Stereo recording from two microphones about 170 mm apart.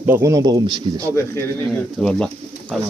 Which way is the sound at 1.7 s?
5° left (ahead or behind).